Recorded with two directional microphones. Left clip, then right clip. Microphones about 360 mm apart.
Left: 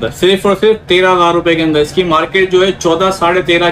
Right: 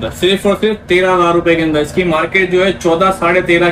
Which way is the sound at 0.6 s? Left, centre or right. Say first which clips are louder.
Left 3 dB; centre.